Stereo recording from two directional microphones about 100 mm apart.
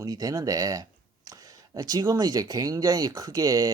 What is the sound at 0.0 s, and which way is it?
Speech, 35° right (ahead or behind).